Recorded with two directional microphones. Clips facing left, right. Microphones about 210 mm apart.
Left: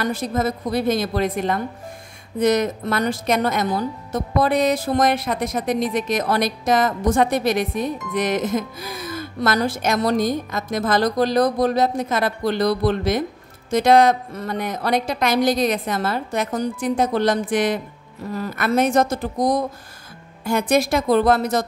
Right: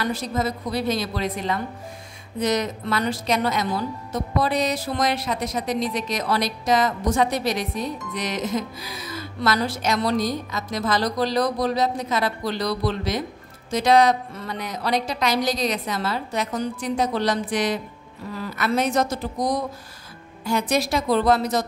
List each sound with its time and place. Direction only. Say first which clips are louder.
0.0 s speech: left 3 dB; 50° left (ahead or behind)
20.4 s speech: left 4 dB; 55° left (ahead or behind)